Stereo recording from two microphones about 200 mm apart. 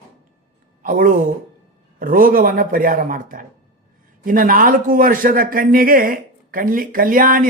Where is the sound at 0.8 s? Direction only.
40° right (ahead or behind).